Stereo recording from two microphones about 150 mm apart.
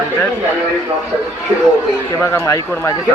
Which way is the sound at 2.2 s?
20° left (ahead or behind).